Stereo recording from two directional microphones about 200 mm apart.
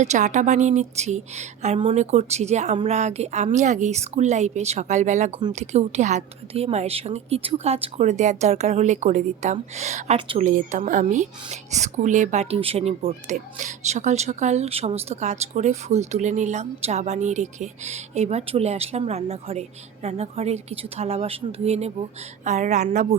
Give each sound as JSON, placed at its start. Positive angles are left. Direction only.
{"t": 0.0, "sound": "speech", "side_deg": -35}
{"t": 10.4, "sound": "speech", "side_deg": -40}